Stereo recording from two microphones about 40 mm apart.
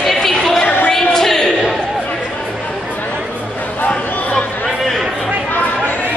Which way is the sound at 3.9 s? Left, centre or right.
Left.